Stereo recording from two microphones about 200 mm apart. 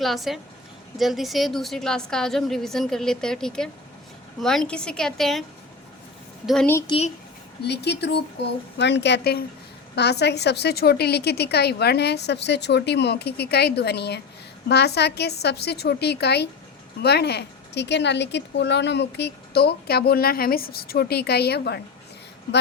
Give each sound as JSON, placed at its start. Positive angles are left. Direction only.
{"t": 0.0, "sound": "a woman's voice", "side_deg": 0}
{"t": 6.7, "sound": "a woman's voice", "side_deg": 15}
{"t": 7.6, "sound": "a woman's voice", "side_deg": 55}